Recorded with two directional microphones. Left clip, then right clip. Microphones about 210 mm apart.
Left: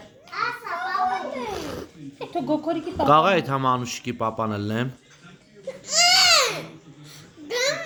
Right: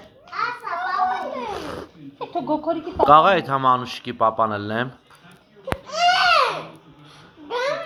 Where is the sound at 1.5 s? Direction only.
45° left (ahead or behind).